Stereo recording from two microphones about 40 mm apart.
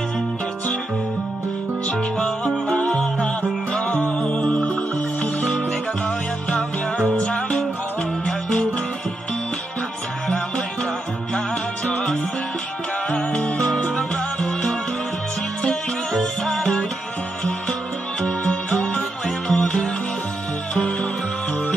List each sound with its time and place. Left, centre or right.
2.4 s music: left
4.3 s music: left
7.2 s music: left
13.1 s music: left
18.5 s music: left
18.9 s music: centre